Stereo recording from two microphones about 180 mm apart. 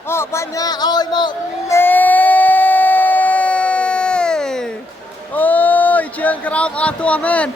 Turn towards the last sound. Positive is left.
turn(degrees=5)  # may be behind; listen again after turning